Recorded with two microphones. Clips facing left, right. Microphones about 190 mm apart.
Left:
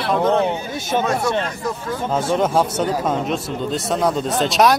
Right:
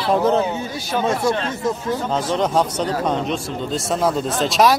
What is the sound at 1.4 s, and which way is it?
Speech, 25° right (ahead or behind).